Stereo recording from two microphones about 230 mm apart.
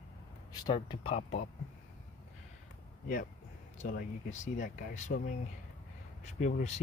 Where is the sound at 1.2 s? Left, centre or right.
Left.